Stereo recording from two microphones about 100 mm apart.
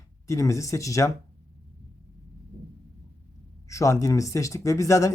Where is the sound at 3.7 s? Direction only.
30° left (ahead or behind).